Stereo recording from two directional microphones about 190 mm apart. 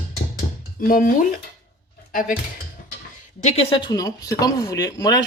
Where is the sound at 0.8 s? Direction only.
50° left (ahead or behind).